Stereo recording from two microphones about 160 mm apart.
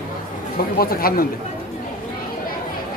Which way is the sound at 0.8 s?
65° left (ahead or behind).